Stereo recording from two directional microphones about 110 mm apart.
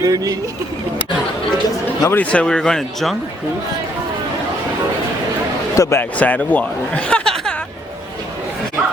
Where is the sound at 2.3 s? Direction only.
5° left (ahead or behind).